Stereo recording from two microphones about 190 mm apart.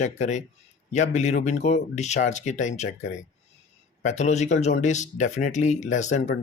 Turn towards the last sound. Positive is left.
turn(degrees=40)  # may be behind; listen again after turning